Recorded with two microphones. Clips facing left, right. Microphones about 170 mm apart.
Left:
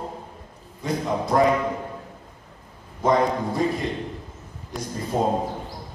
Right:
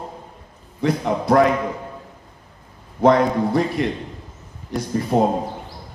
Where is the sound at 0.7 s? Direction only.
75° right (ahead or behind).